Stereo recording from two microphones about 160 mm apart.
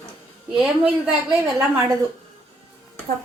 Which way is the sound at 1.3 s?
15° right (ahead or behind).